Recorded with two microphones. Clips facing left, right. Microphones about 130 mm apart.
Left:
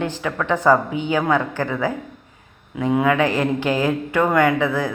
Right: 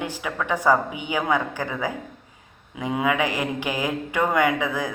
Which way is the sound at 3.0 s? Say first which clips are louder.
Left 3 dB; 15° right (ahead or behind).